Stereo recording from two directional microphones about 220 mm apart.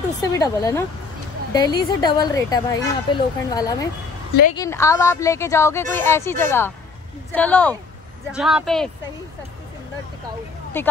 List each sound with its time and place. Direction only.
0.2 s speech: 15° left (ahead or behind)
10.8 s speech: 10° left (ahead or behind)